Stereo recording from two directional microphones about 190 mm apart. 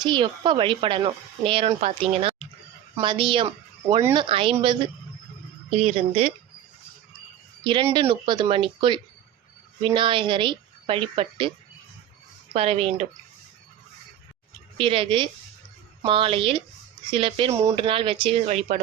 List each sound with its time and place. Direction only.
0.0 s speech: 25° right (ahead or behind)
5.7 s speech: 35° right (ahead or behind)
7.6 s speech: 25° right (ahead or behind)
12.5 s speech: 30° right (ahead or behind)
14.8 s speech: 25° right (ahead or behind)
17.5 s speech: 15° right (ahead or behind)
17.7 s speech: 25° right (ahead or behind)